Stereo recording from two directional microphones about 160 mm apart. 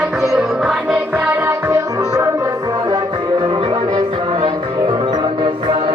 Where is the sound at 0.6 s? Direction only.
5° right (ahead or behind).